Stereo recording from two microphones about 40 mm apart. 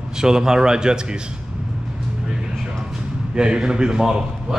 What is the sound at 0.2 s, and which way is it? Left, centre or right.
Speech, centre.